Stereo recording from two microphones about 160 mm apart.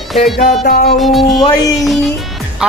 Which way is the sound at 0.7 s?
70° left (ahead or behind).